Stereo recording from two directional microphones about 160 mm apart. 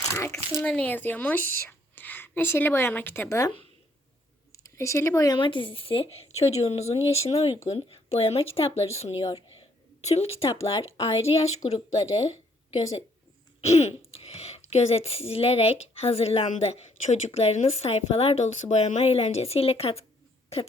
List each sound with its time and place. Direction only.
0.1 s a woman's voice: 15° left (ahead or behind)
4.5 s speech: 20° left (ahead or behind); by 11.8 s 45° left (ahead or behind)
13.6 s speech: 45° left (ahead or behind)